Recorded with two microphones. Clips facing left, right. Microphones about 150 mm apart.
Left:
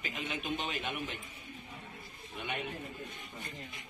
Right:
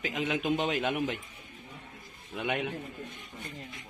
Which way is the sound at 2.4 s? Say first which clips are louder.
Right 7 dB; 90° right.